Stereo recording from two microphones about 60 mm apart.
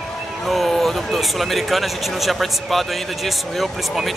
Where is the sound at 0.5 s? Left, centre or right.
Centre.